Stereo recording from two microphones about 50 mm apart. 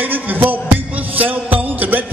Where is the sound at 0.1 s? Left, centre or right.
Right.